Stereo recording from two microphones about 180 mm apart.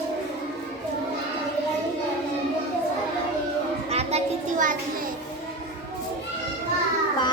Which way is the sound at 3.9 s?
35° right (ahead or behind).